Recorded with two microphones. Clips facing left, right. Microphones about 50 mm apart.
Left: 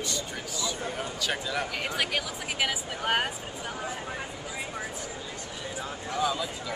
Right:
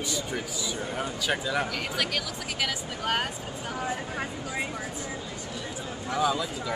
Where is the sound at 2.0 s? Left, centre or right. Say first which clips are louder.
Left 1 dB; centre.